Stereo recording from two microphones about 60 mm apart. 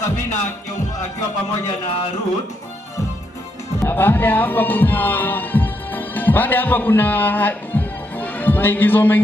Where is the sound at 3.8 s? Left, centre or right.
Left.